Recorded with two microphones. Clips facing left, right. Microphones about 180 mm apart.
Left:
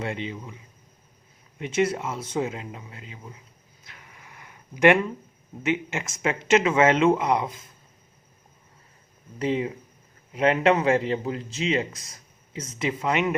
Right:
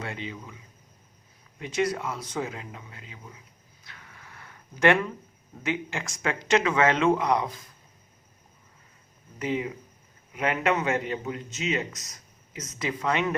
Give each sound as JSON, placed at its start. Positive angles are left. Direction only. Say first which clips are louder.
{"t": 0.0, "sound": "a man's voice", "louder": "left 5 dB", "side_deg": 25}
{"t": 1.5, "sound": "a man's voice", "louder": "left 3 dB", "side_deg": 25}
{"t": 3.8, "sound": "a sound", "louder": "even", "side_deg": 20}
{"t": 5.6, "sound": "a man's voice", "louder": "left 4 dB", "side_deg": 20}
{"t": 9.4, "sound": "a man's voice", "louder": "left 4 dB", "side_deg": 30}